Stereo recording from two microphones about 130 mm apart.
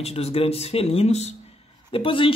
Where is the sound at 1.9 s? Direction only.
40° left (ahead or behind).